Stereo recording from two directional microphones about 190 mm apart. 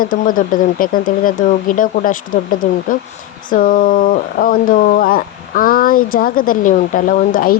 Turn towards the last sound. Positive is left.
turn(degrees=50)  # may be behind; listen again after turning